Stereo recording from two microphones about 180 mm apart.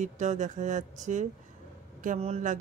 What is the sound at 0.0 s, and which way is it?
Speech, 40° right (ahead or behind).